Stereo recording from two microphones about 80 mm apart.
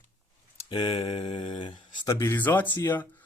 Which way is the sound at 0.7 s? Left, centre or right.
Left.